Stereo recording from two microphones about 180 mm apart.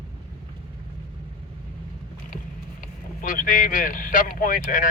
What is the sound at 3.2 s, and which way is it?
Speech, 50° left (ahead or behind).